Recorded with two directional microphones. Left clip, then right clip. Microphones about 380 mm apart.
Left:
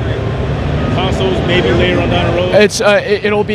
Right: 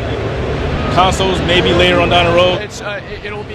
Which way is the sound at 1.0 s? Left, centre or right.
Right.